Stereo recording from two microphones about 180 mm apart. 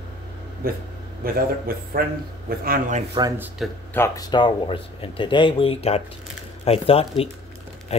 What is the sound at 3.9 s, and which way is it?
Speech, 15° left (ahead or behind).